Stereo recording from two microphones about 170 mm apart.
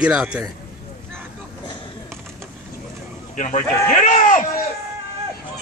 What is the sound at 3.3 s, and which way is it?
A man's voice, 45° left (ahead or behind).